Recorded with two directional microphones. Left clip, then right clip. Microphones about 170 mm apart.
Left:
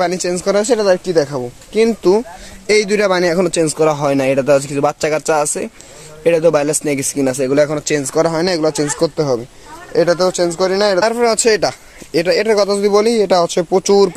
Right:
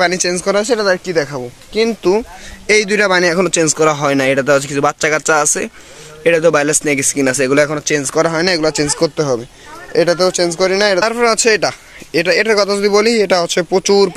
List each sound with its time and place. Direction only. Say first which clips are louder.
0.0 s speech: right 2 dB; centre (ahead or behind)
0.6 s speech: left 2 dB; 20° left (ahead or behind)
2.6 s speech: right 1 dB; 5° left (ahead or behind)
7.7 s speech: right 1 dB; 5° left (ahead or behind)